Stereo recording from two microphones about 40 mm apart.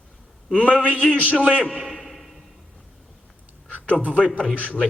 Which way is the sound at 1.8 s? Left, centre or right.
Centre.